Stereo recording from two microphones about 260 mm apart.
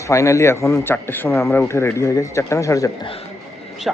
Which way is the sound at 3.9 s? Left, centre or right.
Centre.